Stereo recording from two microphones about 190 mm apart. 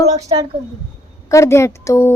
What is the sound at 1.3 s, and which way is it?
Speech, 15° left (ahead or behind).